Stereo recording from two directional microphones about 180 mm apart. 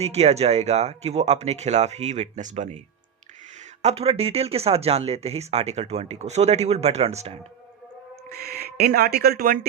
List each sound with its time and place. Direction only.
0.0 s speech: 35° right (ahead or behind)
3.8 s speech: 35° right (ahead or behind)
8.3 s speech: 60° right (ahead or behind)